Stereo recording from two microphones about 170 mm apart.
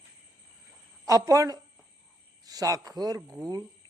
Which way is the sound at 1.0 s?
20° right (ahead or behind).